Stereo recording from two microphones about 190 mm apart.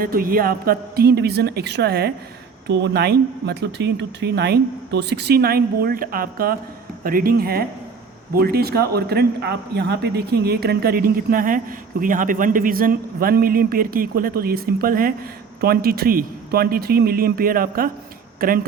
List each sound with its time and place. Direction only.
0.0 s speech: 50° right (ahead or behind)